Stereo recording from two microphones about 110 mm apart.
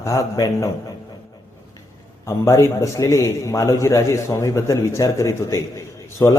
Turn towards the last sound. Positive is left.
turn(degrees=30)  # may be behind; listen again after turning